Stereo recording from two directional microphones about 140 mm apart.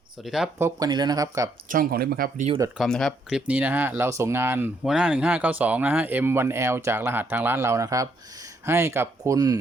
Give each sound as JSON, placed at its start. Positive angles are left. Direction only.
{"t": 0.3, "sound": "speech", "side_deg": -5}
{"t": 0.6, "sound": "speech", "side_deg": -30}
{"t": 1.7, "sound": "speech", "side_deg": -90}
{"t": 2.7, "sound": "speech", "side_deg": 0}